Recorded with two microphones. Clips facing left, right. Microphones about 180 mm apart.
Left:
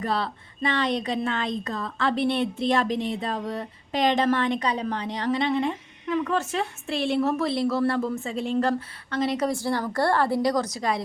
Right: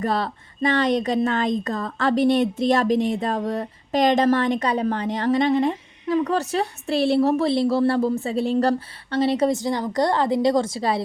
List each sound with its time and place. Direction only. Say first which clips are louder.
0.0 s speech: right 4 dB; 45° right (ahead or behind)